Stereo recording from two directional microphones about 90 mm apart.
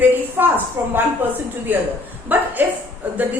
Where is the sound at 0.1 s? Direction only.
20° right (ahead or behind).